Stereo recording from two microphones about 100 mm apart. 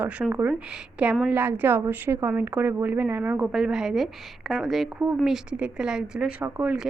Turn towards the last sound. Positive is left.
turn(degrees=-20)  # may be behind; listen again after turning